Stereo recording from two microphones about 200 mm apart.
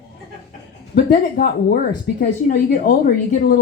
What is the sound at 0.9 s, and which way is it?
Speech, 50° left (ahead or behind).